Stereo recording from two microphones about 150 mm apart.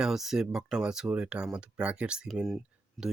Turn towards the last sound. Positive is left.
turn(degrees=0)  # may be behind; listen again after turning